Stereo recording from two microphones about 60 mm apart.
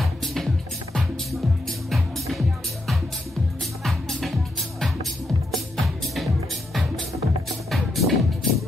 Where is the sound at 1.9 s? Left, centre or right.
Centre.